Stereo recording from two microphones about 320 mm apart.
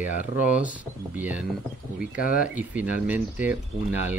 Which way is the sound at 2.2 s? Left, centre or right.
Left.